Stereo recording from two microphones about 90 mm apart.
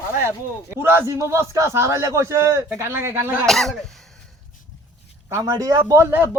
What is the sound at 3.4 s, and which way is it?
Speech, 5° left (ahead or behind).